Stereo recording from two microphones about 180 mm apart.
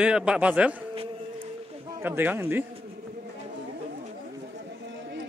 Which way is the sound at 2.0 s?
10° right (ahead or behind).